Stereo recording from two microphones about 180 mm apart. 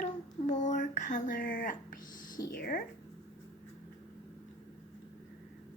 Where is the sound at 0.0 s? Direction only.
40° left (ahead or behind).